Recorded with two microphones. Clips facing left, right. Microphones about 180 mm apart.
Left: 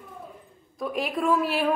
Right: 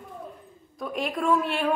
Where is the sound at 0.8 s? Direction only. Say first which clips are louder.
Left 1 dB; centre (ahead or behind).